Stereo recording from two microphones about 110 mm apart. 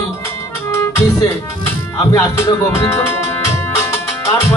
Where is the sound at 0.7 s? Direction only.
25° left (ahead or behind).